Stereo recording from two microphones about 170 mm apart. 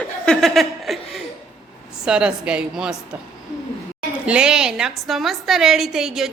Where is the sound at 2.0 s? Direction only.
5° right (ahead or behind).